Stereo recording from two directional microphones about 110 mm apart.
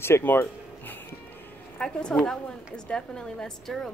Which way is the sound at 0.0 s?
20° left (ahead or behind).